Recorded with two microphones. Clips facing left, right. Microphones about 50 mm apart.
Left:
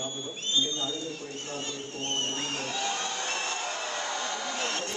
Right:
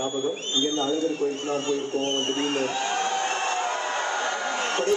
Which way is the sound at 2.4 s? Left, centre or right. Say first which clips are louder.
Right 7 dB; right.